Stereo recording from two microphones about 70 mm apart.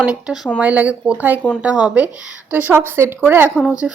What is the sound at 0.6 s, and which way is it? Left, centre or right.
Speech, right.